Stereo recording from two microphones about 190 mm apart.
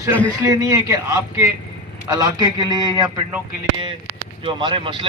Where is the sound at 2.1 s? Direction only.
20° right (ahead or behind).